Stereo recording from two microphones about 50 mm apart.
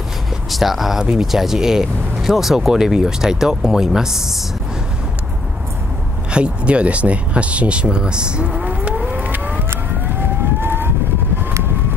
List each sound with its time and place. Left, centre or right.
0.5 s speech: centre
6.3 s speech: right
9.0 s civil defense siren: right
10.6 s vehicle: right